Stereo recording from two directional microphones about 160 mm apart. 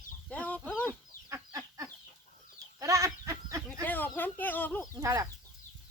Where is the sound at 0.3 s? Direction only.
10° left (ahead or behind).